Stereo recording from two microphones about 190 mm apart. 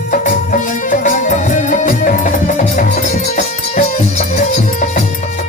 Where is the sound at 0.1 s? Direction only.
45° left (ahead or behind).